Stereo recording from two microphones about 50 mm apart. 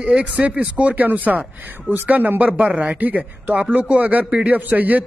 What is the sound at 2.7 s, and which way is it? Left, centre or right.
Speech, centre.